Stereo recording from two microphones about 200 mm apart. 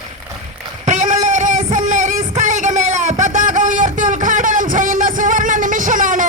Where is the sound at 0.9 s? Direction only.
40° right (ahead or behind).